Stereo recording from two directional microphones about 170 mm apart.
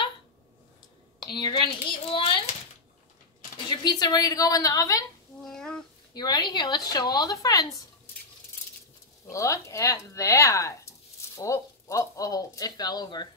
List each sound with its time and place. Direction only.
1.2 s speech: 25° left (ahead or behind)
3.6 s speech: 25° left (ahead or behind)
5.4 s a sound: 5° left (ahead or behind)
6.1 s speech: 25° left (ahead or behind)
9.3 s speech: 15° left (ahead or behind)